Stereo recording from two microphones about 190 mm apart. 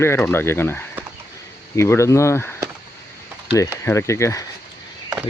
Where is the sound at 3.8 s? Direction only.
15° left (ahead or behind).